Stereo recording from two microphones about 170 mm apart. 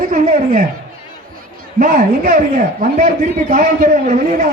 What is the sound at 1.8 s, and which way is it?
A man's voice, 55° right (ahead or behind).